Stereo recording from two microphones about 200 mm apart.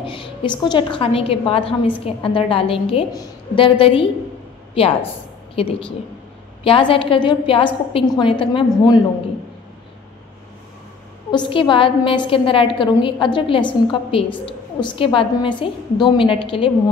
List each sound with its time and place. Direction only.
0.0 s a woman's voice: 25° left (ahead or behind)
11.3 s a woman's voice: 25° left (ahead or behind)